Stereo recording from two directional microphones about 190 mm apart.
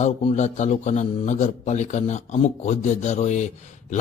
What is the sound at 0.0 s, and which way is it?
A man's voice, 30° left (ahead or behind).